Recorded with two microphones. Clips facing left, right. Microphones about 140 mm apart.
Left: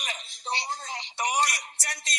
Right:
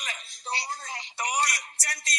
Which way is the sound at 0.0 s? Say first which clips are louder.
Left 2 dB; 25° left (ahead or behind).